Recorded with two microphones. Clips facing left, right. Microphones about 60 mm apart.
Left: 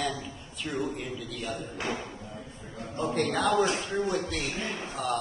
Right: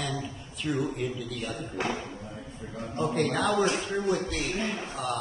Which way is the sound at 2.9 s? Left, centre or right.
Centre.